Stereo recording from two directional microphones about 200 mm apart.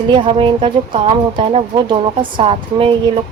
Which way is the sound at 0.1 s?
25° right (ahead or behind).